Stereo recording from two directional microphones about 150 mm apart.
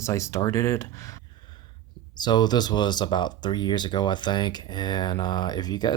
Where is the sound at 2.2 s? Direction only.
30° left (ahead or behind).